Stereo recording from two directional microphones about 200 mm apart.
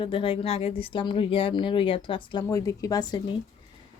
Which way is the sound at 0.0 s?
25° left (ahead or behind).